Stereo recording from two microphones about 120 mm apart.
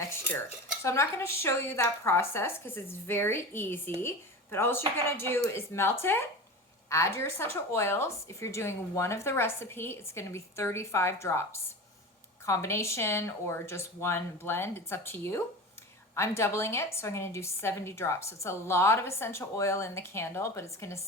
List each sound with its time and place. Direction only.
0.8 s a woman's voice: 25° left (ahead or behind)